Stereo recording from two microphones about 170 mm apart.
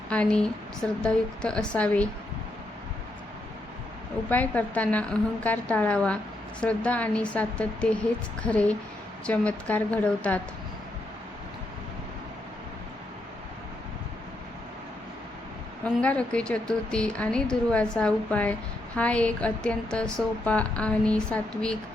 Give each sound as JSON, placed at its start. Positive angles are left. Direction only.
{"t": 0.1, "sound": "a woman's voice", "side_deg": 5}
{"t": 4.3, "sound": "a woman's voice", "side_deg": 10}
{"t": 15.8, "sound": "a woman's voice", "side_deg": 5}